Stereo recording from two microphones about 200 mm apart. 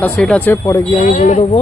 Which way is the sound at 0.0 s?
5° left (ahead or behind).